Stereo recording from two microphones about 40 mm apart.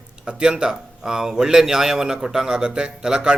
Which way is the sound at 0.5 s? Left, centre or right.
Centre.